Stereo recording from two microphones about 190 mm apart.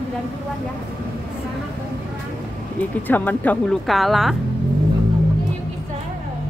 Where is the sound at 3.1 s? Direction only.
10° left (ahead or behind).